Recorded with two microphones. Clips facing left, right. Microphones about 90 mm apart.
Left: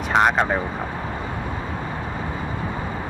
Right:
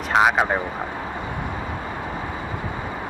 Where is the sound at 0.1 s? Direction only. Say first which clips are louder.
Even; 5° right (ahead or behind).